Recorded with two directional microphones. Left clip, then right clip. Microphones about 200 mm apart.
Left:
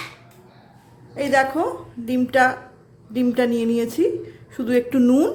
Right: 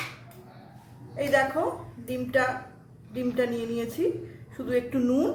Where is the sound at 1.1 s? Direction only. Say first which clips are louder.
Left 5 dB; 45° left (ahead or behind).